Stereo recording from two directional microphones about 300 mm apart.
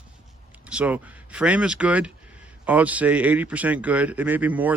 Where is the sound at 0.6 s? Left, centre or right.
Centre.